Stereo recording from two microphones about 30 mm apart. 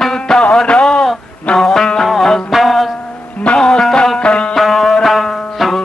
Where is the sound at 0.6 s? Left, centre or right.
Left.